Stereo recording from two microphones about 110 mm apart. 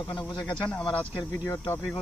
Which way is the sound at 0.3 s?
10° left (ahead or behind).